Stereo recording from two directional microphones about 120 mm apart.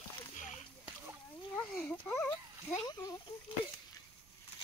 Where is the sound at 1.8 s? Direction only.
15° left (ahead or behind).